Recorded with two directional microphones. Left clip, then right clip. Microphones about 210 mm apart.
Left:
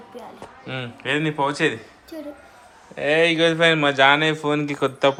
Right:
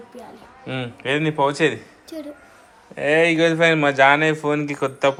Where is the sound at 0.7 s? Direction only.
5° left (ahead or behind).